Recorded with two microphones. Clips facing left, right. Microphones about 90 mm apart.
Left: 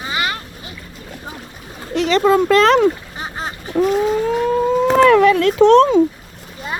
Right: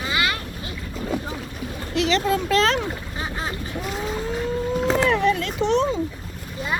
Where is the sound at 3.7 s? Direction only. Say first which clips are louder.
Left 17 dB; 65° left (ahead or behind).